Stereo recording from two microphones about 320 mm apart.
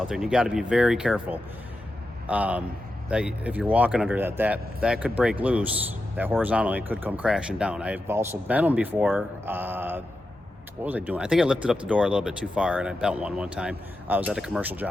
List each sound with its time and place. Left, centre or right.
0.0 s speech: centre